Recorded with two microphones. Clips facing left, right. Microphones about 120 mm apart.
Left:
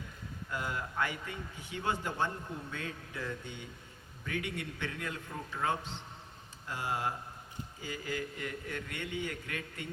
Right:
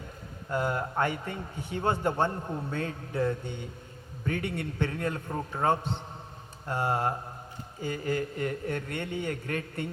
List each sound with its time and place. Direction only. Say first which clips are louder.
0.5 s a man's voice: right 8 dB; 45° right (ahead or behind)
6.7 s mantra: right 7 dB; 60° right (ahead or behind)
7.8 s a man's voice: right 8 dB; 45° right (ahead or behind)